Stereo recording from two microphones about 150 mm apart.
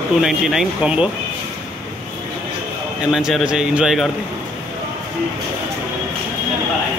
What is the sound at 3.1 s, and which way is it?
Speech, 5° right (ahead or behind).